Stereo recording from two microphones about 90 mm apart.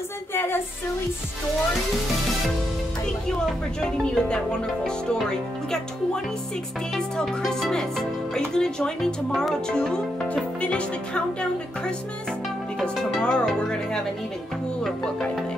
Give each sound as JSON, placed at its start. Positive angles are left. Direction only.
{"t": 0.3, "sound": "music", "side_deg": 25}
{"t": 3.8, "sound": "speech", "side_deg": 10}
{"t": 7.2, "sound": "music", "side_deg": 5}
{"t": 8.4, "sound": "speech", "side_deg": 5}
{"t": 12.8, "sound": "speech", "side_deg": 10}
{"t": 14.8, "sound": "music", "side_deg": 5}